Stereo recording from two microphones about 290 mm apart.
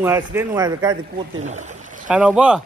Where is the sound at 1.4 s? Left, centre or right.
Right.